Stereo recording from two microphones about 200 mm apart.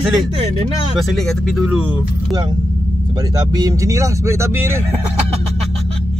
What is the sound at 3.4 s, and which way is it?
Speech, 20° right (ahead or behind).